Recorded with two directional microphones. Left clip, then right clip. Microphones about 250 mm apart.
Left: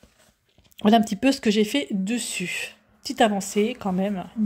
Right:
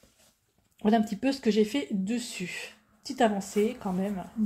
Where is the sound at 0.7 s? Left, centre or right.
Left.